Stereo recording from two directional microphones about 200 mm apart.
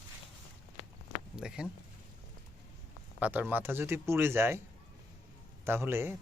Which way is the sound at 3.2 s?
10° right (ahead or behind).